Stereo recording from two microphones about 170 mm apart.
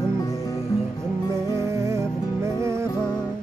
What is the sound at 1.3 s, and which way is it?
Music, 15° right (ahead or behind).